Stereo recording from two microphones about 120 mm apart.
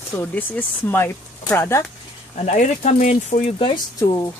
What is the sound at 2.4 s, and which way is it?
Speech, 70° left (ahead or behind).